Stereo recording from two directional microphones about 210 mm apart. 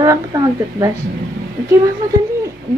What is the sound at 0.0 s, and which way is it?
Speech, 15° right (ahead or behind).